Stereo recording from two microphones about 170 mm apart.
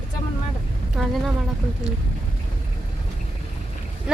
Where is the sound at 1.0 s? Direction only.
Centre (ahead or behind).